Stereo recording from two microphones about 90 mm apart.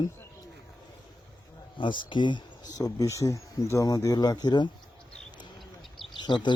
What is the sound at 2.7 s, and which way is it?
Speech, 40° left (ahead or behind).